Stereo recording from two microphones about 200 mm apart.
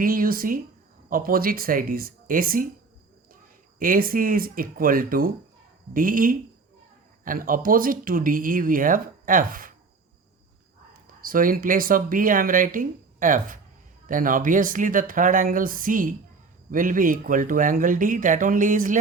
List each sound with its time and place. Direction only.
0.0 s speech: 45° right (ahead or behind)
3.8 s speech: 45° right (ahead or behind)
11.2 s speech: 45° right (ahead or behind)